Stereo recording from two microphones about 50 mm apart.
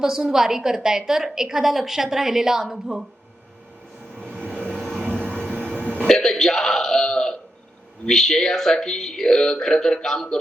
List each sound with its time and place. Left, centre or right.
0.0 s a woman's voice: centre
4.4 s vehicle: right
4.7 s vehicle: centre
5.6 s hiccup: right
6.1 s throat clearing: centre
8.0 s speech: centre